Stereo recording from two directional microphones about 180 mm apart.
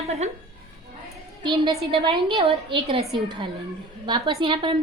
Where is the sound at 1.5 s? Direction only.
25° right (ahead or behind).